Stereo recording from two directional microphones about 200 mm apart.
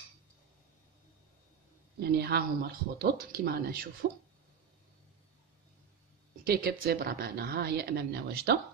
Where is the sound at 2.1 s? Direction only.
55° right (ahead or behind).